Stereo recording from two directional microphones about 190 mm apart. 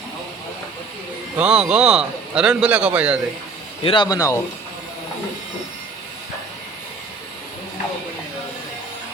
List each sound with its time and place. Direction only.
1.4 s a man's voice: 5° right (ahead or behind)
3.8 s speech: 25° left (ahead or behind)